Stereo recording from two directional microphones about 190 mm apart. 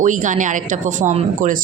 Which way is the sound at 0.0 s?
40° right (ahead or behind).